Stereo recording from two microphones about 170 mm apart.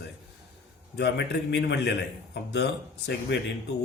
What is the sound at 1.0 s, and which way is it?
Speech, 85° left.